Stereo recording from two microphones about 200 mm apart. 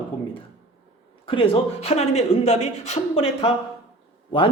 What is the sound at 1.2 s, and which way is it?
Speech, 25° left (ahead or behind).